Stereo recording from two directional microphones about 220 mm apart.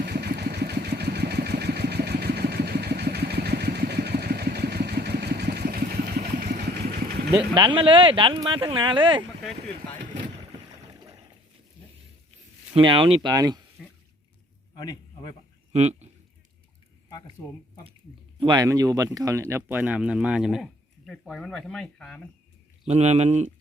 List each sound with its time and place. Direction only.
0.0 s vehicle: 45° right (ahead or behind)
7.5 s speech: 20° right (ahead or behind)
12.7 s speech: 20° right (ahead or behind)
13.8 s a sound: centre (ahead or behind)
14.8 s a sound: 20° left (ahead or behind)
15.7 s speech: 30° right (ahead or behind)
18.3 s speech: 20° right (ahead or behind); by 22.3 s 5° left (ahead or behind)
22.9 s speech: 30° right (ahead or behind)